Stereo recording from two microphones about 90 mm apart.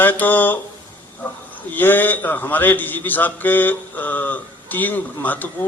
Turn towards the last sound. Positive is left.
turn(degrees=20)  # may be behind; listen again after turning